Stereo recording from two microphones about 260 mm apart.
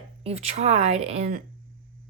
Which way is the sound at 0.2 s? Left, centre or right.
Right.